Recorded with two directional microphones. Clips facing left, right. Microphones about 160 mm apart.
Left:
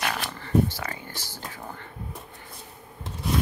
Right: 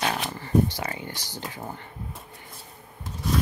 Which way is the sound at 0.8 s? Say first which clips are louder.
Right 2 dB; 20° right (ahead or behind).